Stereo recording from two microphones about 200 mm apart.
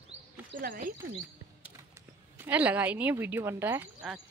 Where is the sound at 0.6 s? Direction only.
45° right (ahead or behind).